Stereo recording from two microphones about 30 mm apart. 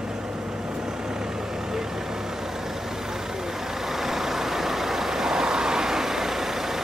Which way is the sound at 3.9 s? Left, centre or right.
Centre.